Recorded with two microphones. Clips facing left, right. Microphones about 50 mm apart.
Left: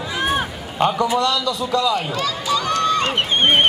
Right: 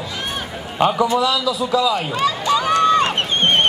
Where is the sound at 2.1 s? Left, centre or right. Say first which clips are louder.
Right 3 dB; right.